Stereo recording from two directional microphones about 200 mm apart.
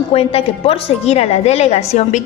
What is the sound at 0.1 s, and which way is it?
A woman's voice, 30° left (ahead or behind).